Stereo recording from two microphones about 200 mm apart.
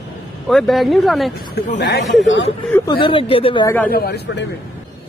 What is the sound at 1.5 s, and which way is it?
Speech, 55° left (ahead or behind).